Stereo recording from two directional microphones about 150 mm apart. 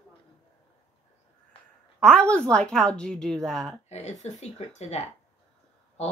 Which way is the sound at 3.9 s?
50° left (ahead or behind).